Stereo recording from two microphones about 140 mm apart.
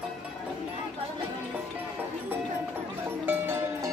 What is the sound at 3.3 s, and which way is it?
Music, 15° right (ahead or behind).